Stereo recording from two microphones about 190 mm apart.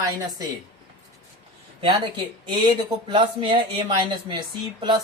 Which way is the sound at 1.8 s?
25° right (ahead or behind).